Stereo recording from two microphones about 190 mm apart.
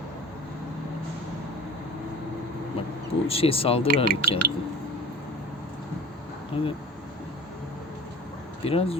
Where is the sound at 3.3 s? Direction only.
30° left (ahead or behind).